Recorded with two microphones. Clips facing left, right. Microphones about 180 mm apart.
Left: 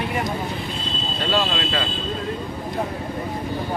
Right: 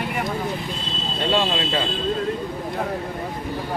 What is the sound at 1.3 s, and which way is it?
Speech, 25° right (ahead or behind).